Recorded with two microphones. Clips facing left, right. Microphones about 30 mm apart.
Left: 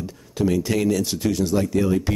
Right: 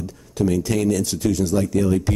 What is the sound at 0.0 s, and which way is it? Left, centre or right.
Speech, centre.